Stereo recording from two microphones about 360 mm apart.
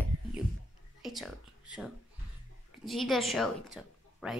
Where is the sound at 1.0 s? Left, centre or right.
Centre.